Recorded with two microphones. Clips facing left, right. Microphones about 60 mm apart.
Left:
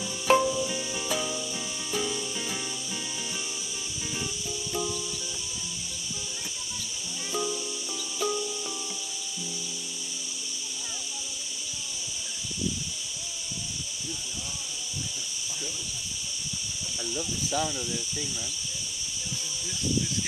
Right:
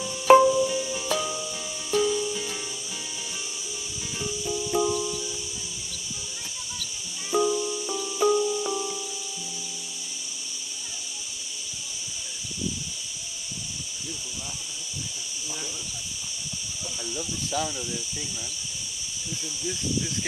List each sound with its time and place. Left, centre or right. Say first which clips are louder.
0.3 s music: right 7 dB; centre
0.7 s music: right 4 dB; centre
4.5 s music: right 9 dB; right
7.3 s music: right 8 dB; centre
17.0 s a sound: left 1 dB; centre